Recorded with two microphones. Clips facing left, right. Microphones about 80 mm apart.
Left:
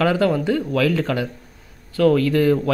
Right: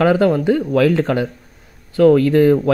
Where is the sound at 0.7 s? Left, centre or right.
Right.